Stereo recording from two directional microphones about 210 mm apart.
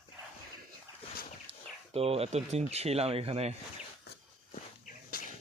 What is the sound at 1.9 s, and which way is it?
Speech, 30° right (ahead or behind).